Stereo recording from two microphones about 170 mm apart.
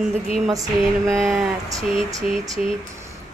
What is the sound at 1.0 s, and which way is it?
A woman's voice, centre (ahead or behind).